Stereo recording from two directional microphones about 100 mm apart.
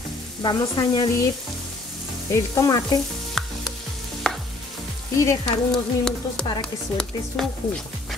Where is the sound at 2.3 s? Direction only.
35° left (ahead or behind).